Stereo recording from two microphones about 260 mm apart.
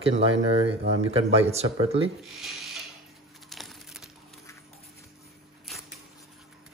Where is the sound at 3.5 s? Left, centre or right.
Centre.